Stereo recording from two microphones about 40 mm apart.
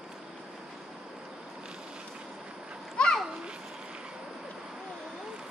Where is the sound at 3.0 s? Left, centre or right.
Left.